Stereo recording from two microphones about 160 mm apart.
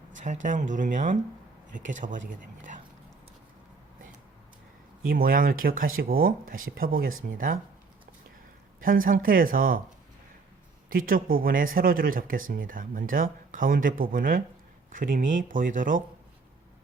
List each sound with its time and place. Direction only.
0.2 s speech: 50° right (ahead or behind)
5.0 s speech: 65° right (ahead or behind)
8.8 s speech: 60° right (ahead or behind)
10.8 s speech: 60° right (ahead or behind)